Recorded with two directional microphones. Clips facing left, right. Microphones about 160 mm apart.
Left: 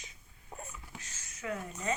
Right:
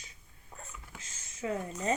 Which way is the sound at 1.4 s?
25° right (ahead or behind).